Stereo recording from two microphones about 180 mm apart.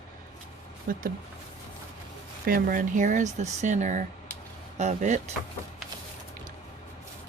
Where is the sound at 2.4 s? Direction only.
50° right (ahead or behind).